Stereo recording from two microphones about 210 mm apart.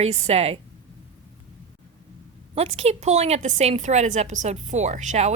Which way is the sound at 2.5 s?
30° right (ahead or behind).